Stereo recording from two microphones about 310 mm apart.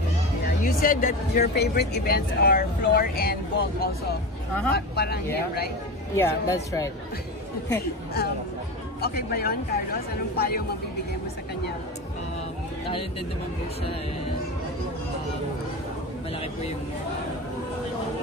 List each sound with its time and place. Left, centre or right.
0.7 s speech: left
6.1 s speech: centre
9.0 s speech: left